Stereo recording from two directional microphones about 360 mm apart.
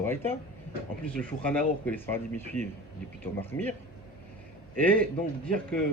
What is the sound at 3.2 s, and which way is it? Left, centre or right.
Speech, centre.